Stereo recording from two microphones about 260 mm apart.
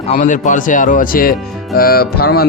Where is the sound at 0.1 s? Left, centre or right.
Left.